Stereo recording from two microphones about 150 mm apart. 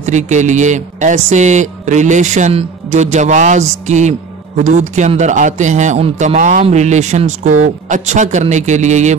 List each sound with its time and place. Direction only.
0.0 s a man's voice: 50° right (ahead or behind)